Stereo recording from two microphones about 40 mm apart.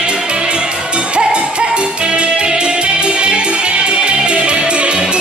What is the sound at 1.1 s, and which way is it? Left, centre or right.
Music, right.